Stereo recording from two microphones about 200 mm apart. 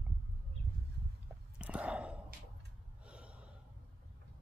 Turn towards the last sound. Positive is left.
turn(degrees=-5)  # may be behind; listen again after turning